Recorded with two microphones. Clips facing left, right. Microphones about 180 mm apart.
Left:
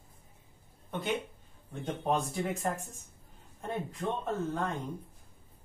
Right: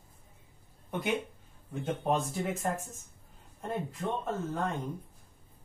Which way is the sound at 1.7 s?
5° right (ahead or behind).